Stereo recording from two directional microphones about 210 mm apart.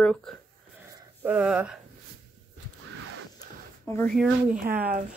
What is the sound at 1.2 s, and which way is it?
Speech, 5° right (ahead or behind).